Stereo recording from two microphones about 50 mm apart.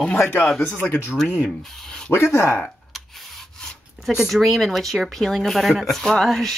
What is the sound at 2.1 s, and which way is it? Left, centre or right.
Speech, left.